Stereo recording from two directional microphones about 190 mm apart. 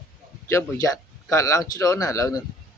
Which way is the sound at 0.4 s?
15° left (ahead or behind).